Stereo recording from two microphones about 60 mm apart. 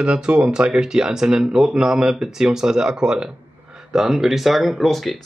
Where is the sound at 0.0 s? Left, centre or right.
Centre.